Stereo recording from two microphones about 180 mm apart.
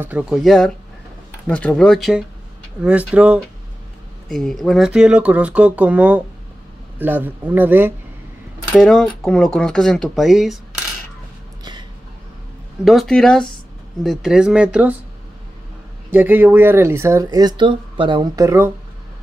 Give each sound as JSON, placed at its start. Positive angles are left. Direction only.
{"t": 0.0, "sound": "speech", "side_deg": -5}
{"t": 8.7, "sound": "speech", "side_deg": 0}
{"t": 12.8, "sound": "speech", "side_deg": 0}
{"t": 16.1, "sound": "speech", "side_deg": -10}